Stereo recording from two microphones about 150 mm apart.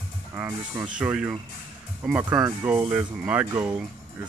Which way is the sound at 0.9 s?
10° right (ahead or behind).